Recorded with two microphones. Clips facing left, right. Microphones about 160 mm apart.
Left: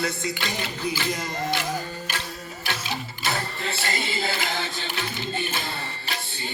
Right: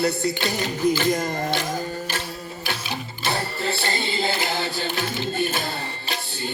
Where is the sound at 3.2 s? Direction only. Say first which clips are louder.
Right 4 dB; 30° right (ahead or behind).